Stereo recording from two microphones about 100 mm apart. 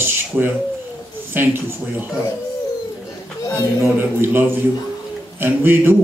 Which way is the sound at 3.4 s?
35° left (ahead or behind).